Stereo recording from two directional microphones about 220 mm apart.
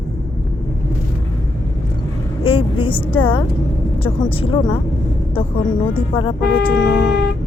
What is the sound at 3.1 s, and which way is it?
Speech, 25° left (ahead or behind).